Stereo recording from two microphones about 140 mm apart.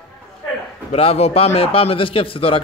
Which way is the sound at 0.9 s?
45° left (ahead or behind).